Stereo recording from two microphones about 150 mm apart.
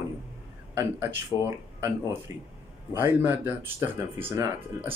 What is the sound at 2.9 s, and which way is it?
Speech, 10° right (ahead or behind).